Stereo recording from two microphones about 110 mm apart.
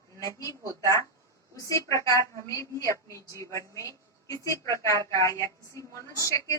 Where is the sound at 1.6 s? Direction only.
30° left (ahead or behind).